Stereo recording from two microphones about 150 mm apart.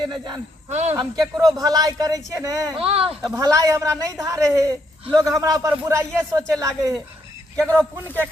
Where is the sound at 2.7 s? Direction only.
40° right (ahead or behind).